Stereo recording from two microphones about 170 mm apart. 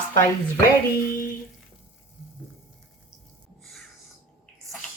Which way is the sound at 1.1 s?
55° left (ahead or behind).